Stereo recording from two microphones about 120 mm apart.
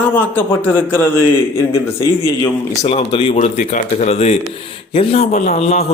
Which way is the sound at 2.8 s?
65° left (ahead or behind).